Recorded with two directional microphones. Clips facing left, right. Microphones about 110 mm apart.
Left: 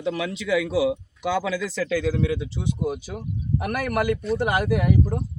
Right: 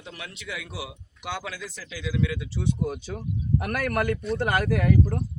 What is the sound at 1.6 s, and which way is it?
Speech, 80° left.